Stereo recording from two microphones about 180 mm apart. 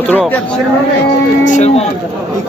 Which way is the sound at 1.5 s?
40° left (ahead or behind).